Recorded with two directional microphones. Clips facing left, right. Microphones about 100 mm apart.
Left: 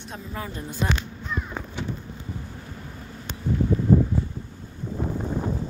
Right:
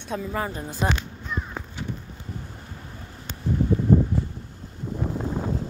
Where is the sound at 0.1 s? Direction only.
90° right.